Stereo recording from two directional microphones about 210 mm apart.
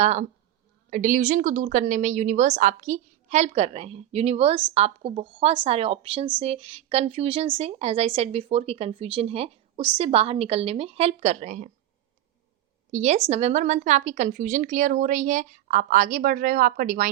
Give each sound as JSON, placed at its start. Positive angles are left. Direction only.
{"t": 0.0, "sound": "a woman's voice", "side_deg": -30}
{"t": 12.9, "sound": "a woman's voice", "side_deg": -30}